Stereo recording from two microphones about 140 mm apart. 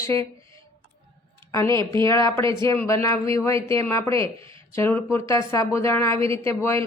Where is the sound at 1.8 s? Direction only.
35° right (ahead or behind).